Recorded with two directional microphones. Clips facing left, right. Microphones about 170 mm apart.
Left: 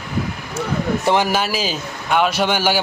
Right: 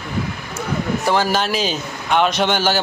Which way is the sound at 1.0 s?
20° left (ahead or behind).